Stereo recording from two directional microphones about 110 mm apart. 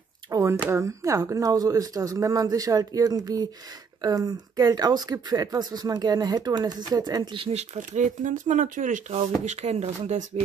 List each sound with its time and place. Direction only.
0.3 s speech: 25° right (ahead or behind)
7.3 s speech: 70° right (ahead or behind); by 8.0 s 85° right
9.1 s speech: 90° right